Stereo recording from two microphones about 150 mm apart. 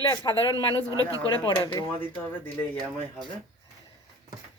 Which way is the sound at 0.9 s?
25° right (ahead or behind).